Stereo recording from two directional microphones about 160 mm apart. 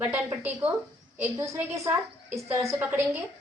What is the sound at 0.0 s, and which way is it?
A woman's voice, 10° right (ahead or behind).